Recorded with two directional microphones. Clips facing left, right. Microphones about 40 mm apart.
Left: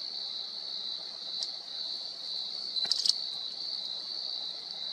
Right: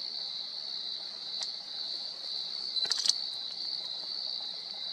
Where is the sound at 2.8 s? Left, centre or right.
Right.